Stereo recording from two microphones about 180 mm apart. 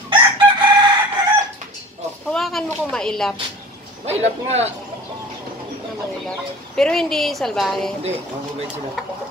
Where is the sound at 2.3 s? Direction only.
Centre (ahead or behind).